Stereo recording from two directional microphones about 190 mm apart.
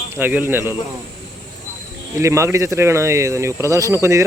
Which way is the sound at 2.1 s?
15° right (ahead or behind).